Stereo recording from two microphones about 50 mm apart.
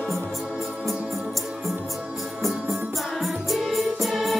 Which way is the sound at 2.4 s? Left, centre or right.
Centre.